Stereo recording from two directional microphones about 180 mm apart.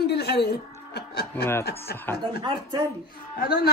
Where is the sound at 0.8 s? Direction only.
65° left (ahead or behind).